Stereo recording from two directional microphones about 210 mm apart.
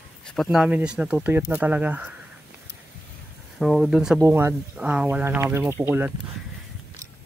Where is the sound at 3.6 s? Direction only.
Centre (ahead or behind).